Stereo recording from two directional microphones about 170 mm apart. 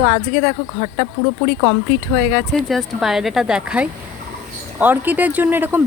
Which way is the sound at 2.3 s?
Centre (ahead or behind).